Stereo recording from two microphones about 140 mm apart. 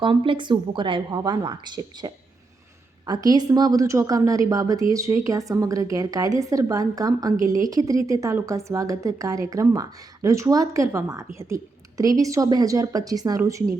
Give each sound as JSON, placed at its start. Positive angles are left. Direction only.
{"t": 0.0, "sound": "a woman's voice", "side_deg": -35}